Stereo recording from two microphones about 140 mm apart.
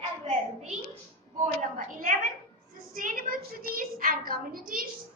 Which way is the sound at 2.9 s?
80° right.